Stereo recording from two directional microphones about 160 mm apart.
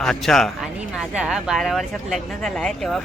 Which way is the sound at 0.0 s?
5° left (ahead or behind).